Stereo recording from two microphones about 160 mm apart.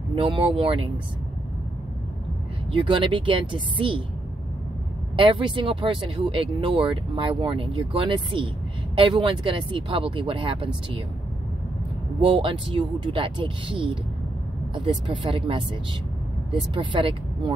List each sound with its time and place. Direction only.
0.1 s speech: 35° right (ahead or behind)
2.8 s speech: 30° right (ahead or behind)
5.1 s speech: 30° right (ahead or behind)
12.2 s speech: 35° right (ahead or behind)